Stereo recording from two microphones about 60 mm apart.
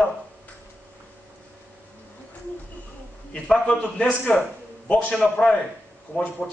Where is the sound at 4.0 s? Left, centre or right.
Centre.